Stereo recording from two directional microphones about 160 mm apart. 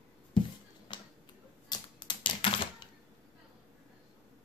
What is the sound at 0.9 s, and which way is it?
Finger snapping, 25° left (ahead or behind).